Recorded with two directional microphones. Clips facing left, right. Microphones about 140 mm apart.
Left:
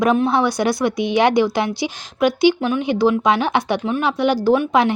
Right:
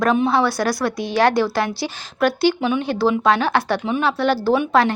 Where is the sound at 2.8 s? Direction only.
15° left (ahead or behind).